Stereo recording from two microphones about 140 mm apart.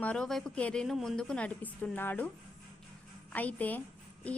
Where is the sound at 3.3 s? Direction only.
10° left (ahead or behind).